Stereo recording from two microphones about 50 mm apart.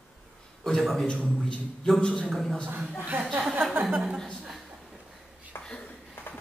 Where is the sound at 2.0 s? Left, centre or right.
Centre.